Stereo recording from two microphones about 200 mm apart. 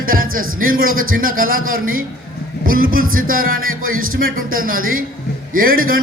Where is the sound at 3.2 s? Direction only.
45° right (ahead or behind).